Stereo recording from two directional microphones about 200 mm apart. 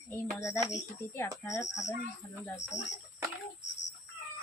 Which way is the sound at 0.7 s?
15° left (ahead or behind).